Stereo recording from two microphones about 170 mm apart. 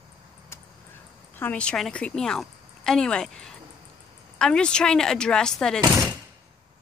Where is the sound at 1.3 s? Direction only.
10° left (ahead or behind).